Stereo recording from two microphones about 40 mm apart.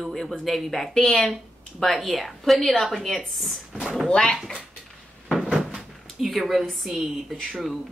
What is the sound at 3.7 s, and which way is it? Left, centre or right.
Speech, centre.